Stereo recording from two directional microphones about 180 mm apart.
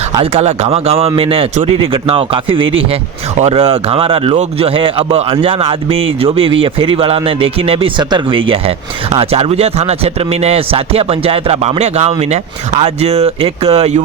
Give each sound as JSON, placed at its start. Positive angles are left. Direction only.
{"t": 0.3, "sound": "speech", "side_deg": -35}